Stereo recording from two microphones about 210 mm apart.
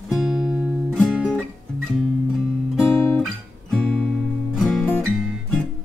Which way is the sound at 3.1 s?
5° left (ahead or behind).